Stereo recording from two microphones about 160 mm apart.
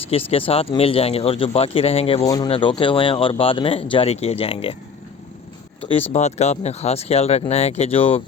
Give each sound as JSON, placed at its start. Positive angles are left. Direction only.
{"t": 0.3, "sound": "speech", "side_deg": 40}
{"t": 2.2, "sound": "speech", "side_deg": 20}
{"t": 2.5, "sound": "speech", "side_deg": 30}
{"t": 5.9, "sound": "speech", "side_deg": 40}